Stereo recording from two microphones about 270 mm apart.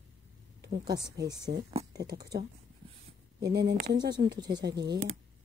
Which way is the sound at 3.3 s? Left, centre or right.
Right.